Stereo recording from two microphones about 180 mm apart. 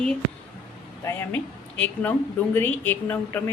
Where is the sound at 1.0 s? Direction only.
10° left (ahead or behind).